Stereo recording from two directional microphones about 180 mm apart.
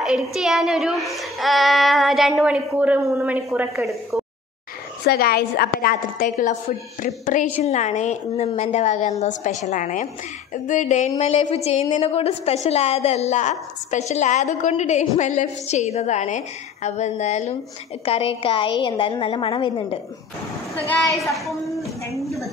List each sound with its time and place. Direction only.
0.0 s a child's voice: centre (ahead or behind)
3.7 s a child's voice: centre (ahead or behind)
5.0 s a woman's voice: 60° left (ahead or behind); by 20.0 s 25° left (ahead or behind)
20.7 s a woman's voice: 10° left (ahead or behind)
21.5 s a sound: centre (ahead or behind)